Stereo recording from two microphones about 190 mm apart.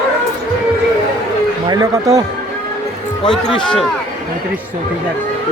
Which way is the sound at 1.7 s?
20° right (ahead or behind).